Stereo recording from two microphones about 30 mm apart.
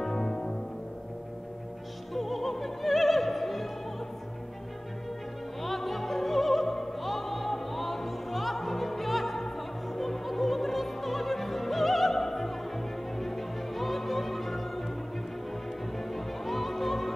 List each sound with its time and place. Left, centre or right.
0.0 s music: centre
2.1 s music: centre
5.6 s opera: centre
16.0 s music: centre